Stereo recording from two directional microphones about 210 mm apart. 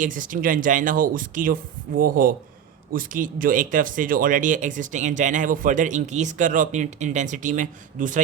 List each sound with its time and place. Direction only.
0.0 s speech: 40° right (ahead or behind)